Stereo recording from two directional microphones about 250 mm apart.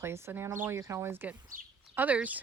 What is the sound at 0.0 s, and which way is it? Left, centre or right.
Speech, centre.